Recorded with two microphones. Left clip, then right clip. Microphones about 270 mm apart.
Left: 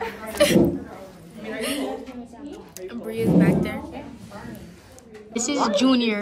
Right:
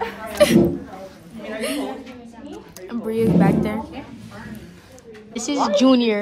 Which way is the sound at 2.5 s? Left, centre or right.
Centre.